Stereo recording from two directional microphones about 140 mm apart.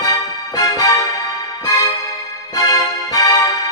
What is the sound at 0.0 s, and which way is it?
Music, 25° left (ahead or behind).